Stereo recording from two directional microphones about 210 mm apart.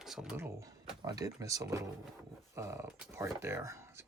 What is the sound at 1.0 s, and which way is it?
Speech, 15° right (ahead or behind).